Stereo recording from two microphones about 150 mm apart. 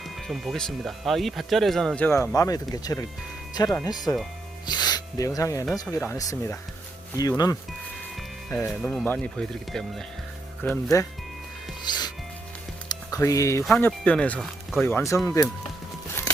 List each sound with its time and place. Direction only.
0.2 s speech: centre (ahead or behind)
2.0 s speech: 20° left (ahead or behind)
8.4 s speech: 10° left (ahead or behind)
10.6 s speech: 15° left (ahead or behind)
11.9 s music: 30° left (ahead or behind)
13.7 s speech: 10° left (ahead or behind)
14.8 s speech: 20° left (ahead or behind)